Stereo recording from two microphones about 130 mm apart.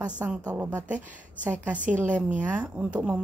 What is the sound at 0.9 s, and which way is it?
Speech, 10° right (ahead or behind).